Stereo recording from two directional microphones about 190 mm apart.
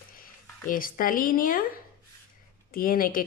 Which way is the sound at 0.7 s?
45° left (ahead or behind).